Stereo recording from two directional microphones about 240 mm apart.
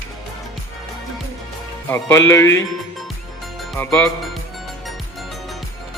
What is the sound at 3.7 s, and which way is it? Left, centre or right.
Speech, centre.